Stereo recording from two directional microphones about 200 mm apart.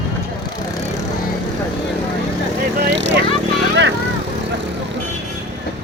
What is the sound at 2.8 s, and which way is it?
Speech, 65° right (ahead or behind).